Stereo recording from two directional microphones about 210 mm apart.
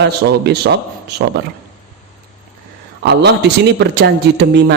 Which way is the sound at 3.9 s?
55° right (ahead or behind).